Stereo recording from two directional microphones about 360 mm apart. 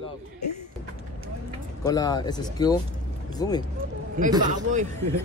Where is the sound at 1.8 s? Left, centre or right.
Centre.